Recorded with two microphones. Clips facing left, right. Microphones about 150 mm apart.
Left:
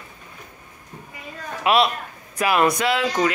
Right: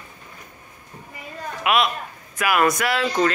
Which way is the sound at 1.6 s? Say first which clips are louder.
Left 2 dB; 30° left (ahead or behind).